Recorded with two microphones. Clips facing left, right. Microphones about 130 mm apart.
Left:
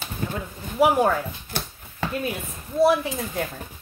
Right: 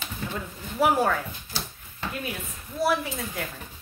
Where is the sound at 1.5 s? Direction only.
60° left (ahead or behind).